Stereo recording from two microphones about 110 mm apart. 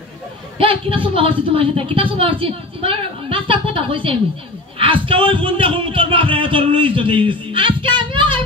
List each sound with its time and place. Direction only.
0.6 s a woman's voice: 55° right (ahead or behind)